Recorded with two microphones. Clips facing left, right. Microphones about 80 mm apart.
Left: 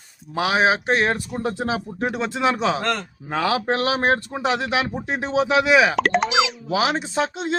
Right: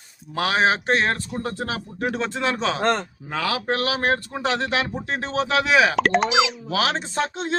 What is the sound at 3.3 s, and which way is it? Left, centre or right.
Speech, left.